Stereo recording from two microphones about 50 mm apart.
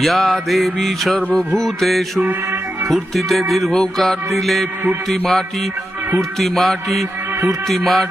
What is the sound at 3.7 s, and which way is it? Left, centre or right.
Mantra, centre.